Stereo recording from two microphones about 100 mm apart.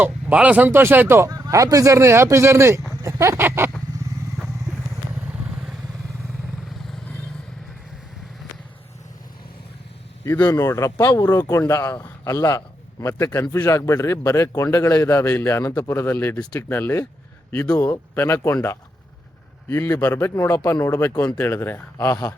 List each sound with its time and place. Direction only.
0.0 s speech: 15° right (ahead or behind)
1.3 s speech: 35° right (ahead or behind)
10.4 s speech: 35° left (ahead or behind)
11.7 s a man's voice: 30° left (ahead or behind)
18.1 s speech: 25° left (ahead or behind)
19.6 s a man's voice: 25° left (ahead or behind)